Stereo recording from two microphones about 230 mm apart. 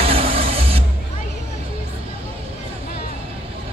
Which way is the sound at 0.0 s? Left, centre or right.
Right.